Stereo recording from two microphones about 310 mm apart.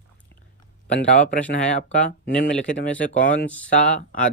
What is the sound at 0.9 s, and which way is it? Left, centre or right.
Speech, left.